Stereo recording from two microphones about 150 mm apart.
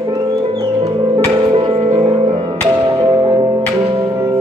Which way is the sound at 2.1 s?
35° right (ahead or behind).